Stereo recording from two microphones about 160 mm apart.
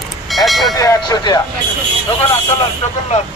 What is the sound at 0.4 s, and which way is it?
Speech, centre (ahead or behind).